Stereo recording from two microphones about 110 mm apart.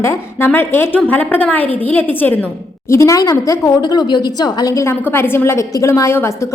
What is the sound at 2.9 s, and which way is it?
A woman's voice, 30° left (ahead or behind).